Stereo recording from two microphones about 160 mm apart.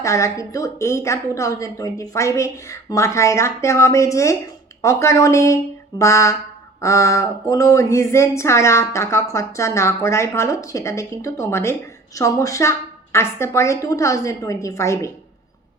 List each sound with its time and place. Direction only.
0.0 s speech: 20° left (ahead or behind)